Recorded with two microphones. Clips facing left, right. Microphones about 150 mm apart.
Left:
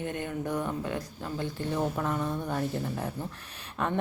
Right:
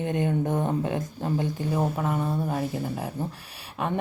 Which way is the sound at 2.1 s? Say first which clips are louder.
Right 3 dB; 30° right (ahead or behind).